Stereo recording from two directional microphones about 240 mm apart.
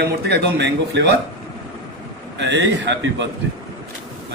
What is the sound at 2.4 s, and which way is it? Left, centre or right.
Speech, right.